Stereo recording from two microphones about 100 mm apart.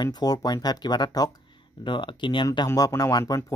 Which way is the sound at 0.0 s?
40° left (ahead or behind).